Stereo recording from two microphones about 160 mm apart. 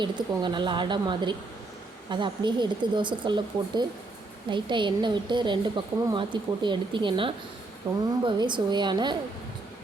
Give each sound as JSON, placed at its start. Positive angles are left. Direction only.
{"t": 0.0, "sound": "a woman's voice", "side_deg": -30}